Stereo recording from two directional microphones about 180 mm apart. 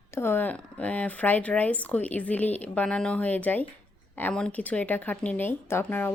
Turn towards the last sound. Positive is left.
turn(degrees=10)  # may be behind; listen again after turning